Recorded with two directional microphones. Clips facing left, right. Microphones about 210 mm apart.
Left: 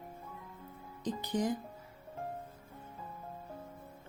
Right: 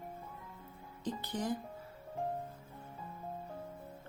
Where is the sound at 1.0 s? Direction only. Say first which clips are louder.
Left 4 dB; 15° left (ahead or behind).